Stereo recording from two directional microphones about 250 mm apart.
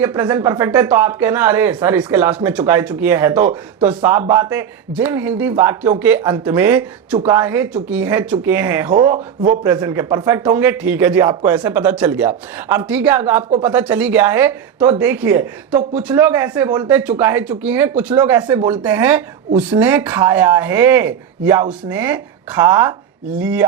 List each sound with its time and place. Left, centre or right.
0.0 s speech: centre
4.2 s speech: right
4.5 s speech: centre
7.2 s speech: centre
7.4 s speech: centre
8.9 s speech: right
9.6 s speech: centre
15.7 s speech: right
16.0 s speech: centre